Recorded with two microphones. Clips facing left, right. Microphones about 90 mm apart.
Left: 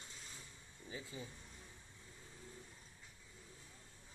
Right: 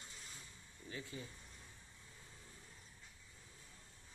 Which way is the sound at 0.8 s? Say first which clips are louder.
Right 1 dB; 20° left (ahead or behind).